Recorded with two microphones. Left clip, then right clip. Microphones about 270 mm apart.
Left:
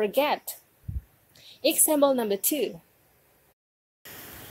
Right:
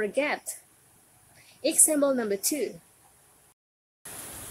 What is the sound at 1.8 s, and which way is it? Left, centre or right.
Speech, centre.